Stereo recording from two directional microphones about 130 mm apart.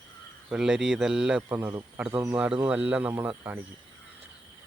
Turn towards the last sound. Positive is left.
turn(degrees=-15)  # may be behind; listen again after turning